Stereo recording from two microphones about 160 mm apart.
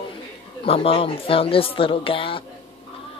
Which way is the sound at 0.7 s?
35° left (ahead or behind).